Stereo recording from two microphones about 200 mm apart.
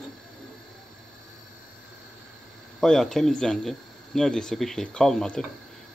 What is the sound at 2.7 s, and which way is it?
Speech, centre (ahead or behind).